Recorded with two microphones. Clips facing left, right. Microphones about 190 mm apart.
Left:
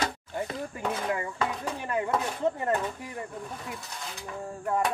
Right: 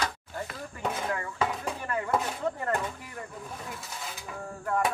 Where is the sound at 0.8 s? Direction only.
Centre (ahead or behind).